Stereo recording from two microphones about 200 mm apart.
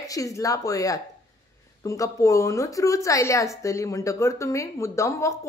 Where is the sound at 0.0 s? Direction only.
15° left (ahead or behind).